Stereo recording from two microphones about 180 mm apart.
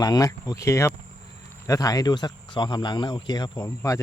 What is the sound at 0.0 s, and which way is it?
Speech, 20° left (ahead or behind).